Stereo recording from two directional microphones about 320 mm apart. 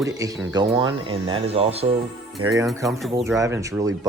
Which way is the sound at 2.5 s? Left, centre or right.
Centre.